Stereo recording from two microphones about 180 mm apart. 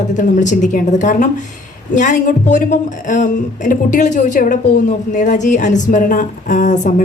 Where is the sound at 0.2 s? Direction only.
45° left (ahead or behind).